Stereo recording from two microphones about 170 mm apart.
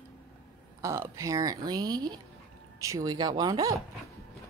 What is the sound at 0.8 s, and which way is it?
Speech, 20° right (ahead or behind).